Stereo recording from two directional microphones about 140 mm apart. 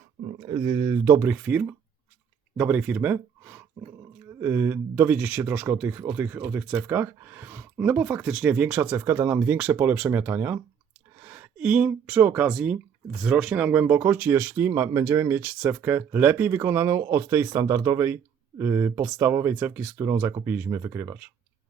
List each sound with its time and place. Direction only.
0.3 s speech: 45° right (ahead or behind)
0.6 s speech: 25° right (ahead or behind)